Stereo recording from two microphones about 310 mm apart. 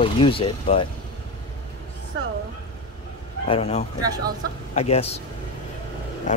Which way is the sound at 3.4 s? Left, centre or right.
Centre.